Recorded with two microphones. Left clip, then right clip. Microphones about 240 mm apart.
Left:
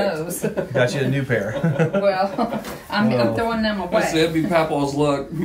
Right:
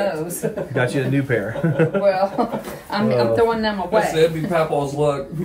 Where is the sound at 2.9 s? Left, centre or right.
Centre.